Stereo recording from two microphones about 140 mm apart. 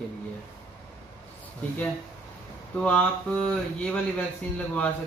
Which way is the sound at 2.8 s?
10° left (ahead or behind).